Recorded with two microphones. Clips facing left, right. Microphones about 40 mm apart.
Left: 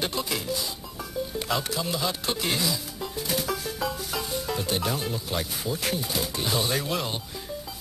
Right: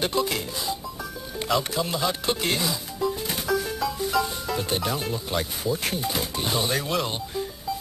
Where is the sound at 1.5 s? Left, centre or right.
Centre.